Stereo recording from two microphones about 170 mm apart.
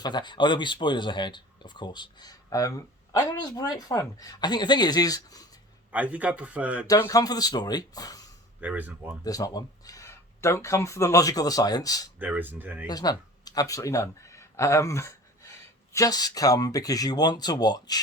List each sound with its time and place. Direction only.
0.0 s speech: 25° left (ahead or behind)
5.9 s speech: 10° right (ahead or behind)
6.8 s speech: 20° left (ahead or behind)
8.6 s speech: 10° right (ahead or behind)
9.2 s speech: 20° left (ahead or behind)
12.2 s speech: 10° right (ahead or behind)
12.9 s speech: 25° left (ahead or behind)